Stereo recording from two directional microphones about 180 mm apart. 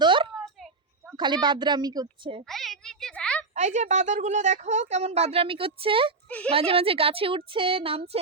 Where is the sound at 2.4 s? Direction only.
Centre (ahead or behind).